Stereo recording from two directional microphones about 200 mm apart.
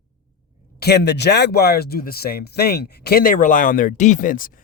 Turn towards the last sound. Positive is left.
turn(degrees=45)  # may be behind; listen again after turning